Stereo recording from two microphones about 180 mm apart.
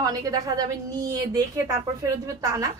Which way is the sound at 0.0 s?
20° right (ahead or behind).